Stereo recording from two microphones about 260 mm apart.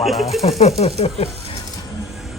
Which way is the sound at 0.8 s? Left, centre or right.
Left.